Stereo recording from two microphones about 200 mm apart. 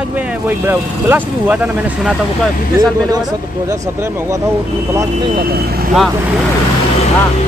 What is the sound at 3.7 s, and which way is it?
Speech, 15° right (ahead or behind).